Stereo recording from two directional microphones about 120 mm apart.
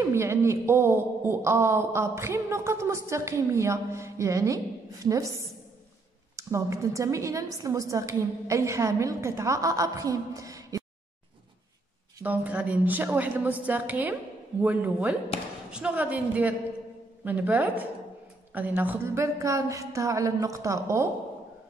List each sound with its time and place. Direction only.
0.0 s a man's voice: 20° right (ahead or behind)
12.2 s a woman's voice: 15° right (ahead or behind)